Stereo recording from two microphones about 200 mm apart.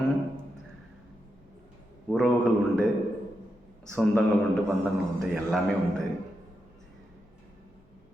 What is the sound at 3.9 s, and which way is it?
Speech, 5° left (ahead or behind).